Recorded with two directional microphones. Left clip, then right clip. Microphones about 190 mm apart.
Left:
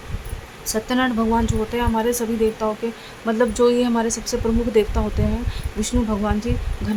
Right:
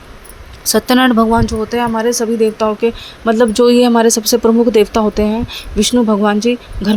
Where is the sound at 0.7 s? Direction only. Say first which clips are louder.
Right 10 dB; 40° right (ahead or behind).